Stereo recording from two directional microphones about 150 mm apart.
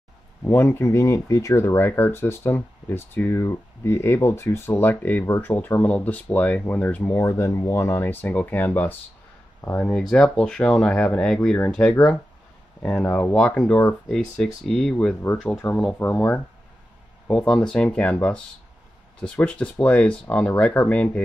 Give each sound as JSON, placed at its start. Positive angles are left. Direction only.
{"t": 0.4, "sound": "speech", "side_deg": 15}